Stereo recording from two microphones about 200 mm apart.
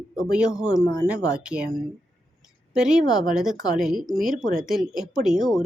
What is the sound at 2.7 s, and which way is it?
A woman's voice, 5° right (ahead or behind).